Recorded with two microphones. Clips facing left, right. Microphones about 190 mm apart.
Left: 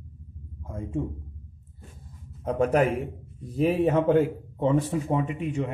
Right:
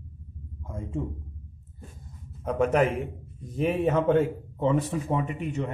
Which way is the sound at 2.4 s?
35° left (ahead or behind).